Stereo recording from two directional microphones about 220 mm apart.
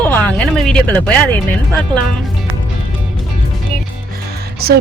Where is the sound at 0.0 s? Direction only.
5° left (ahead or behind).